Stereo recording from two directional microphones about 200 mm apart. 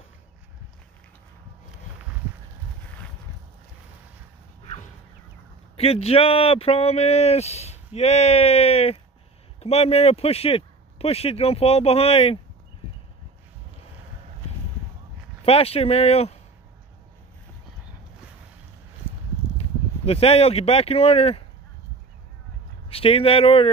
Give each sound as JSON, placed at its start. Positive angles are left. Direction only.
{"t": 5.8, "sound": "speech", "side_deg": 30}
{"t": 15.4, "sound": "speech", "side_deg": 30}
{"t": 19.5, "sound": "speech", "side_deg": 30}
{"t": 22.8, "sound": "speech", "side_deg": 30}